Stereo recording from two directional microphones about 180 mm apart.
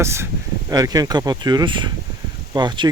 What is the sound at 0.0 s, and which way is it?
Speech, 15° right (ahead or behind).